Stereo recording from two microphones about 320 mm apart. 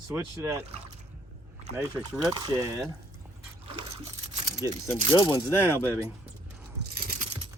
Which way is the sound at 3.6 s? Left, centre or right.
Centre.